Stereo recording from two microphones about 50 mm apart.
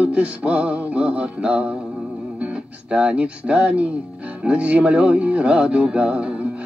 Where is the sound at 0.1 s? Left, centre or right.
Right.